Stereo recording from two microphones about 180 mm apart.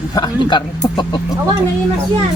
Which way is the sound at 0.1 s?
20° left (ahead or behind).